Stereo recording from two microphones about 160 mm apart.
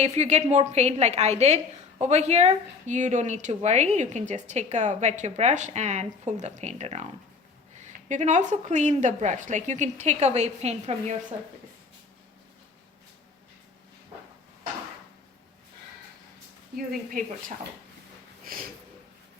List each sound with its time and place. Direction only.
0.0 s a woman's voice: 45° right (ahead or behind)
16.7 s speech: 65° right (ahead or behind)
18.4 s a sound: 60° right (ahead or behind)